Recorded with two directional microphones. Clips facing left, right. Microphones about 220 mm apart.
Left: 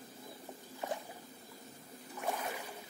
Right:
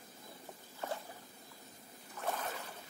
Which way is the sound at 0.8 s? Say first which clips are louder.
Left 1 dB; 15° left (ahead or behind).